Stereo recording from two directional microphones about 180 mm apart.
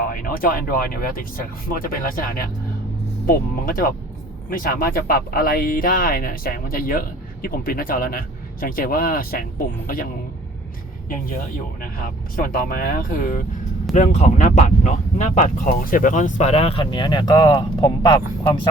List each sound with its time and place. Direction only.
0.0 s speech: 50° left (ahead or behind)
11.8 s speech: 50° left (ahead or behind); by 18.7 s 25° left (ahead or behind)